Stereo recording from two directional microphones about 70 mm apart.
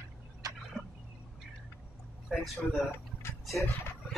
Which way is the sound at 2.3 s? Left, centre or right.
Centre.